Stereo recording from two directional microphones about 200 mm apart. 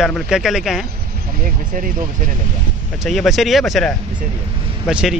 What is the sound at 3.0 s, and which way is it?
A man's voice, centre (ahead or behind).